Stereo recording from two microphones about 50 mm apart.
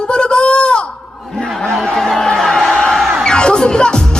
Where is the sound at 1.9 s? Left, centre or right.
Centre.